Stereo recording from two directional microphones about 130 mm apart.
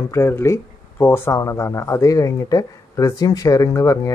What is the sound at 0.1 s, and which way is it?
Speech, 20° left (ahead or behind).